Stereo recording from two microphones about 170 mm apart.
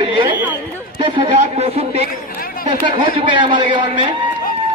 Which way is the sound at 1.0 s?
35° right (ahead or behind).